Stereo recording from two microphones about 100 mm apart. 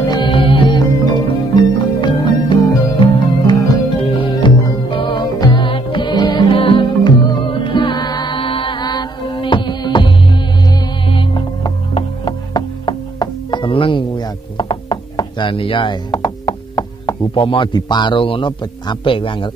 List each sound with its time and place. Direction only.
0.0 s music: 40° left (ahead or behind)
0.3 s music: 60° left (ahead or behind)
5.2 s music: 45° left (ahead or behind); by 6.9 s 65° left (ahead or behind)
7.0 s music: 45° left (ahead or behind); by 11.4 s 60° left (ahead or behind)
12.3 s music: 45° left (ahead or behind)
17.3 s a man's voice: 60° left (ahead or behind)
17.7 s a man's voice: 50° left (ahead or behind)